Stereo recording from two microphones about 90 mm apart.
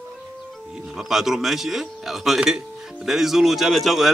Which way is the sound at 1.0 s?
5° right (ahead or behind).